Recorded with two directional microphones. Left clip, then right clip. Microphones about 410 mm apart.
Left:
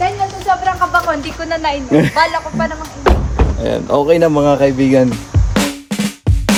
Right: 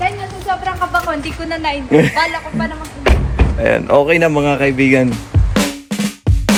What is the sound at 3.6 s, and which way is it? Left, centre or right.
Speech, centre.